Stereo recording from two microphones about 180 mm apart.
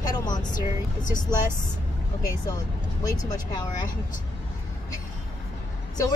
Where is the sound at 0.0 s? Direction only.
20° left (ahead or behind).